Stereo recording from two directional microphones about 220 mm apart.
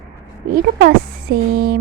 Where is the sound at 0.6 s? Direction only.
45° right (ahead or behind).